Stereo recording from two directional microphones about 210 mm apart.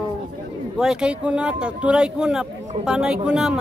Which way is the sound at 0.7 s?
5° right (ahead or behind).